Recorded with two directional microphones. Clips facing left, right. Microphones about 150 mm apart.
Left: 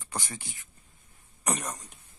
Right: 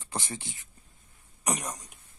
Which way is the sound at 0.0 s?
25° right (ahead or behind).